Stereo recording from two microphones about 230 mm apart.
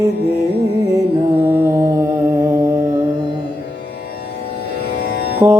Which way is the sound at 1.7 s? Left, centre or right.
Centre.